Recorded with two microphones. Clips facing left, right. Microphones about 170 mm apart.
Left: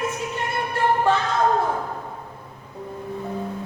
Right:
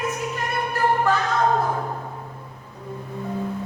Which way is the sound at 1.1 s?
25° left (ahead or behind).